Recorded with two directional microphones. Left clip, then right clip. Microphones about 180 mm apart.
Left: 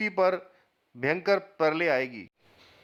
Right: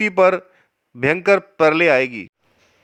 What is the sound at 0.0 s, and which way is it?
A man's voice, 30° right (ahead or behind).